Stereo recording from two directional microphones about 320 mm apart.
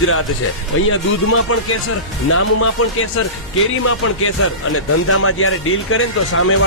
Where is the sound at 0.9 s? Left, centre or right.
Left.